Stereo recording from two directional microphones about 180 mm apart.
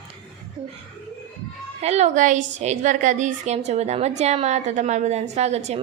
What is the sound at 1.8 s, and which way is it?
A woman's voice, 35° right (ahead or behind).